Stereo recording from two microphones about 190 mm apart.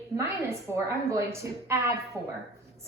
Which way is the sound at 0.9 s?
15° right (ahead or behind).